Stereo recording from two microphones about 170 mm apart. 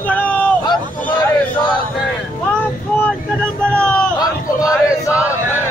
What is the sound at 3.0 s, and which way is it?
Speech, 5° left (ahead or behind).